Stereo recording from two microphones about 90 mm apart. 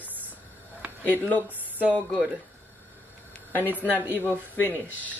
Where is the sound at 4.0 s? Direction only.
20° right (ahead or behind).